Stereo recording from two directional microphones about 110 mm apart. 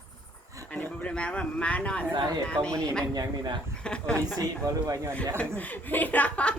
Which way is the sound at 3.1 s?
40° right (ahead or behind).